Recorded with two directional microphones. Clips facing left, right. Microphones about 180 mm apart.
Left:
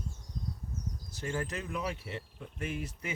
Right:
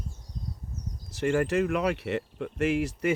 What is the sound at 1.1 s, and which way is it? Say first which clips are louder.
Speech: right 11 dB; 75° right (ahead or behind).